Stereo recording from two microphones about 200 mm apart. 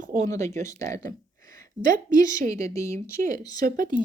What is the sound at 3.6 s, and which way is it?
Speech, 45° right (ahead or behind).